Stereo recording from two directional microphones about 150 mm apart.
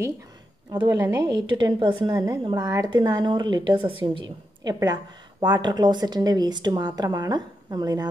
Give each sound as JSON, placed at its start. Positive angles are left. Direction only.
{"t": 0.7, "sound": "a woman's voice", "side_deg": -30}